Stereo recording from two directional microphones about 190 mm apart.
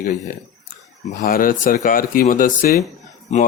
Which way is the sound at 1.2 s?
45° left (ahead or behind).